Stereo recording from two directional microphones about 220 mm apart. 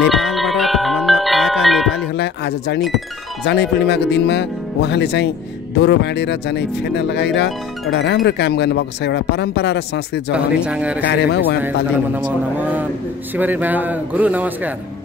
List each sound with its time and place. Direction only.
0.0 s marimba: centre (ahead or behind)
2.1 s speech: 50° left (ahead or behind)
10.3 s speech: 5° right (ahead or behind)
11.1 s speech: 50° left (ahead or behind)
12.5 s a man's voice: 10° right (ahead or behind)